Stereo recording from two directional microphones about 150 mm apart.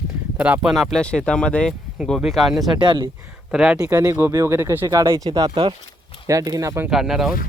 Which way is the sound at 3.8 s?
20° right (ahead or behind).